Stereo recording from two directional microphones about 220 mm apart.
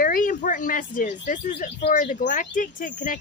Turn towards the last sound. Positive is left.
turn(degrees=35)  # may be behind; listen again after turning